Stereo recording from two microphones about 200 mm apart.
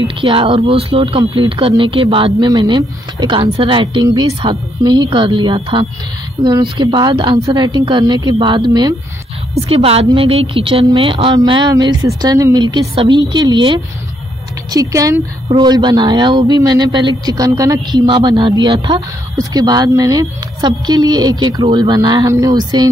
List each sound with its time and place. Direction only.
0.0 s a man's voice: 25° right (ahead or behind)